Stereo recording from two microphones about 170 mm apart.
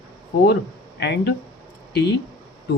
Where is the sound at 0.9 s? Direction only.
85° left.